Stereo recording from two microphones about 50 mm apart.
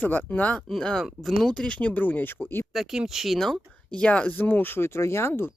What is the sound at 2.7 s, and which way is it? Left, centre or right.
Speech, centre.